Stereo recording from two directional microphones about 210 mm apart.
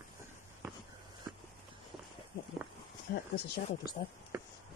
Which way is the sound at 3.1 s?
50° left (ahead or behind).